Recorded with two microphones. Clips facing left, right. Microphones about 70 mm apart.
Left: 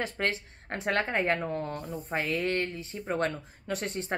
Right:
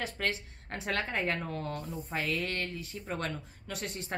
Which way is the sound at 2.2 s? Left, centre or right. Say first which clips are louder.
Left 5 dB; left.